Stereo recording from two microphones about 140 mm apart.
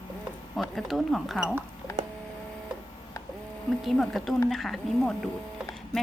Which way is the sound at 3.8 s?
Centre (ahead or behind).